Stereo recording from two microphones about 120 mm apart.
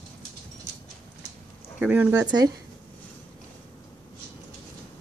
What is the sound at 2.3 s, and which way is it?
Speech, 30° right (ahead or behind).